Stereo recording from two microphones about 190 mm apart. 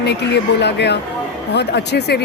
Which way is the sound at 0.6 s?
65° left (ahead or behind).